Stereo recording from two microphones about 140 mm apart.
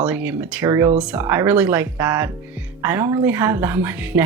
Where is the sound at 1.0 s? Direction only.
10° right (ahead or behind).